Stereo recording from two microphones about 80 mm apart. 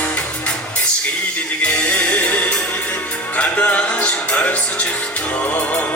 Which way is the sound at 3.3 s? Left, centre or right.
Centre.